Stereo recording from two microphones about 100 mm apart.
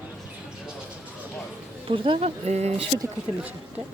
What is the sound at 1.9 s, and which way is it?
Speech, 75° right (ahead or behind).